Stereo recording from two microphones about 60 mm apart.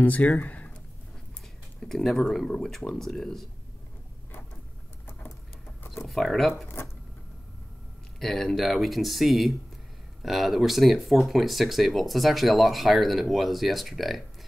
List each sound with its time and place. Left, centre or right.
0.0 s speech: left
1.8 s speech: centre
6.0 s speech: centre
8.2 s speech: centre